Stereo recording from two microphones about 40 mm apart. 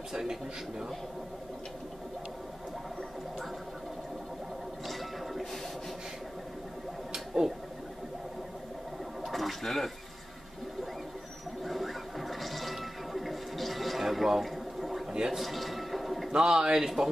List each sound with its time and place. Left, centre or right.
0.1 s speech: centre
4.8 s a sound: centre
7.1 s a sound: centre
9.2 s toilet flush: centre
11.6 s music: centre
16.3 s speech: centre